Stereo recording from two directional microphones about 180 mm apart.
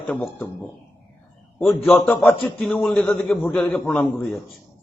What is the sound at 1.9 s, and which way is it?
A man's voice, centre (ahead or behind).